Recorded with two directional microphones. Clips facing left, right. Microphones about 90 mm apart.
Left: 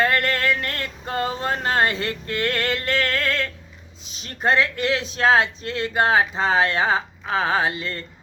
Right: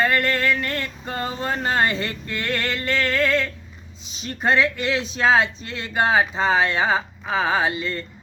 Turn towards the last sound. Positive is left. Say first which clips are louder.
# right 1 dB
turn(degrees=0)  # may be behind; listen again after turning